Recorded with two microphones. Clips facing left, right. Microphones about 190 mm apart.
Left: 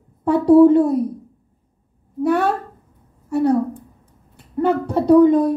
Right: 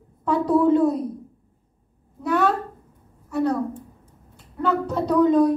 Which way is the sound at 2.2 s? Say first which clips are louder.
Left 4 dB; 55° left (ahead or behind).